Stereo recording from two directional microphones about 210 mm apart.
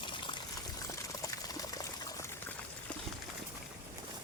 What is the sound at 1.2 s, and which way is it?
Water, 15° left (ahead or behind).